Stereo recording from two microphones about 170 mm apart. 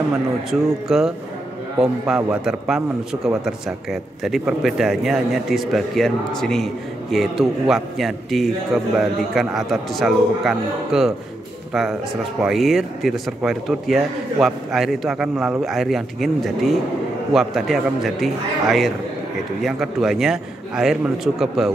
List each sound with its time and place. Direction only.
0.8 s speech: centre (ahead or behind)